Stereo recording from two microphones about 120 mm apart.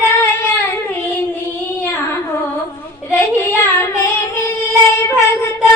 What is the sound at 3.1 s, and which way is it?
Child singing, 25° left (ahead or behind).